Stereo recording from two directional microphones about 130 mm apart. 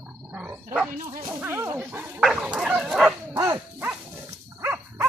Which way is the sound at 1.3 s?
15° right (ahead or behind).